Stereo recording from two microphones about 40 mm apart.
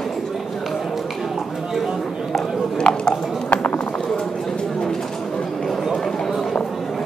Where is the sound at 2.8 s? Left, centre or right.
Left.